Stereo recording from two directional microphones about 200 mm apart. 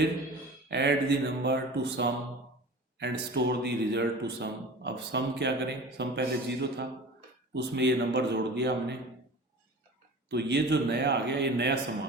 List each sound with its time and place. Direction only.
0.7 s a man's voice: 60° right (ahead or behind)
10.2 s a man's voice: 60° right (ahead or behind)